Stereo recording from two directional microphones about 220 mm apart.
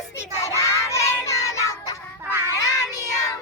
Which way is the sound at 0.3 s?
15° left (ahead or behind).